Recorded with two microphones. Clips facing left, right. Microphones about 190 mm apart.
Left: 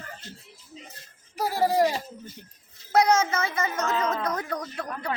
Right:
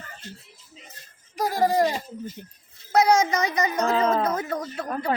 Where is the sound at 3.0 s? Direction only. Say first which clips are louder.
Right 3 dB; 15° right (ahead or behind).